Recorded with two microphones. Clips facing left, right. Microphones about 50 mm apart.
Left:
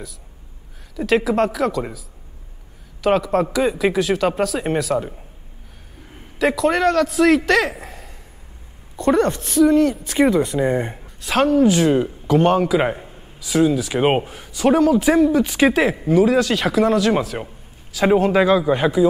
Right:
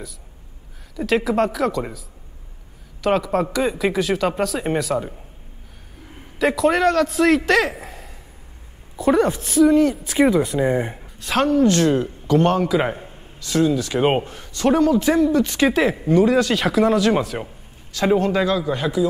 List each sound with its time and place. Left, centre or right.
0.9 s speech: centre
6.3 s speech: centre
18.0 s a man's voice: centre